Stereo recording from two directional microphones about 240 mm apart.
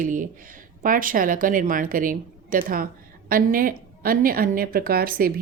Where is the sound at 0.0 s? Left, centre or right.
Right.